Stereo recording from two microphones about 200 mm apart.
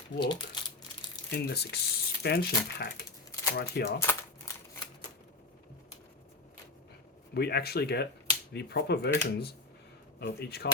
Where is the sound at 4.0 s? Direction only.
10° left (ahead or behind).